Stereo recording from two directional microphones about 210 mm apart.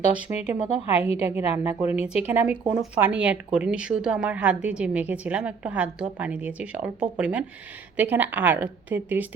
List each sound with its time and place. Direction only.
0.1 s speech: 5° right (ahead or behind)
1.0 s a woman's voice: 30° left (ahead or behind)
1.5 s speech: 10° right (ahead or behind)